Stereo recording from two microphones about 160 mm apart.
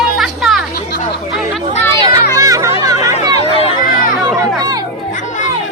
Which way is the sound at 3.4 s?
35° left (ahead or behind).